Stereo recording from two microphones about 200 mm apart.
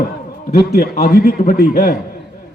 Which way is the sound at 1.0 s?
45° left (ahead or behind).